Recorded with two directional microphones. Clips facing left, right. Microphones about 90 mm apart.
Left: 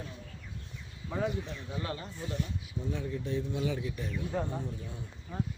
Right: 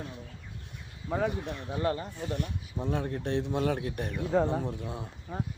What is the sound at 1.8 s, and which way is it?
Speech, 35° right (ahead or behind).